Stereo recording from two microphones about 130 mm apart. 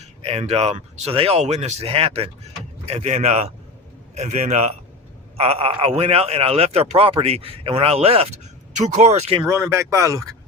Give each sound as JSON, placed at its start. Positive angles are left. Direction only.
{"t": 0.2, "sound": "speech", "side_deg": -55}
{"t": 9.5, "sound": "speech", "side_deg": -20}